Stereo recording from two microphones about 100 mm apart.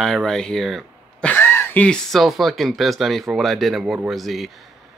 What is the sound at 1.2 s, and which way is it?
Cough, 20° left (ahead or behind).